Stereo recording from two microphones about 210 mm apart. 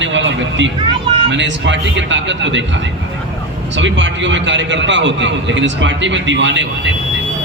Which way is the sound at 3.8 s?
60° right (ahead or behind).